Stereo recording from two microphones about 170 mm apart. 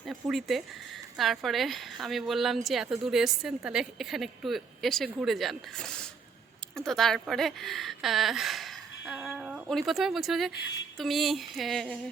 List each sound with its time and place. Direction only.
0.0 s a woman's voice: centre (ahead or behind)
10.5 s speech: 90° left
10.9 s a woman's voice: centre (ahead or behind)